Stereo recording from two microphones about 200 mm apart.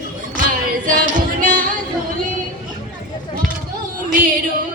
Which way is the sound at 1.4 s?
40° right (ahead or behind).